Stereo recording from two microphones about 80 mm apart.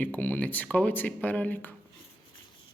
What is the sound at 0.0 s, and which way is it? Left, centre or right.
Speech, left.